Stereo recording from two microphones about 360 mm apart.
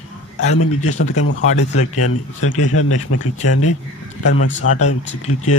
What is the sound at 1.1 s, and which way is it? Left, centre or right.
Speech, left.